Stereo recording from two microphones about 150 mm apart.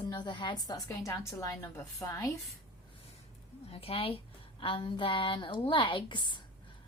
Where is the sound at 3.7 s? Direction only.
40° left (ahead or behind).